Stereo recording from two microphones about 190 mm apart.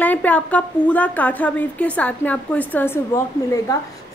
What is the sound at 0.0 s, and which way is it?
Speech, 10° left (ahead or behind).